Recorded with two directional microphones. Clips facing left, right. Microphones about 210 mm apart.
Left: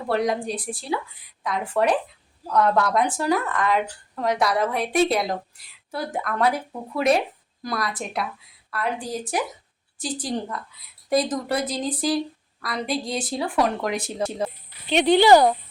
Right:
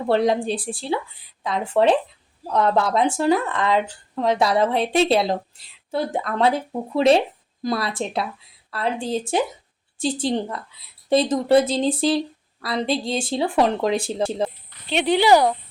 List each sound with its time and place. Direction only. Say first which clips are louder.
0.1 s speech: right 4 dB; 25° right (ahead or behind)
14.7 s speech: left 4 dB; centre (ahead or behind)